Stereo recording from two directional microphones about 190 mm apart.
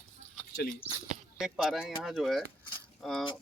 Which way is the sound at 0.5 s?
55° left (ahead or behind).